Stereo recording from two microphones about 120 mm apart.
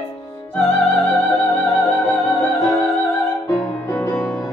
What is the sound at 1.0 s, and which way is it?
Music, 15° left (ahead or behind).